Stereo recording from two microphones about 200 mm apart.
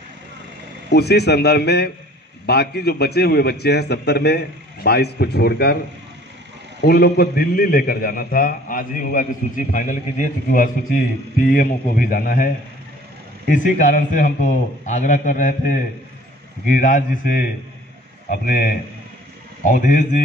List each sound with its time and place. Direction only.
0.8 s a man's voice: 55° left (ahead or behind)
6.8 s a man's voice: 50° left (ahead or behind)
13.5 s a man's voice: 40° left (ahead or behind)